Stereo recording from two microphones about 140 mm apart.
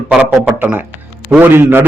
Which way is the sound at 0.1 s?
10° right (ahead or behind).